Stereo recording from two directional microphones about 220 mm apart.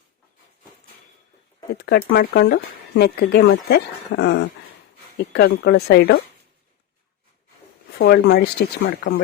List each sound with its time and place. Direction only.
1.7 s speech: 45° left (ahead or behind)
7.9 s speech: 50° left (ahead or behind)